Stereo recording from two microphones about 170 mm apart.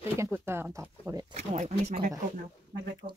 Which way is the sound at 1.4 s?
40° right (ahead or behind).